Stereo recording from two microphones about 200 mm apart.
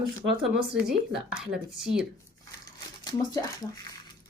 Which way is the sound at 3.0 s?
20° left (ahead or behind).